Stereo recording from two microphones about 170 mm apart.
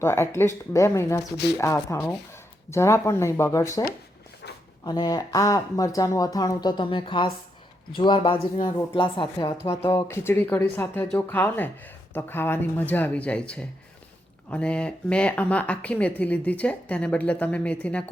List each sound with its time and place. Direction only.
0.0 s speech: 15° left (ahead or behind)
4.4 s a sound: 85° left
4.8 s speech: 25° left (ahead or behind); by 18.0 s 5° left (ahead or behind)